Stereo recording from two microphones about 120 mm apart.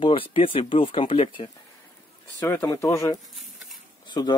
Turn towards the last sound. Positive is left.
turn(degrees=35)  # may be behind; listen again after turning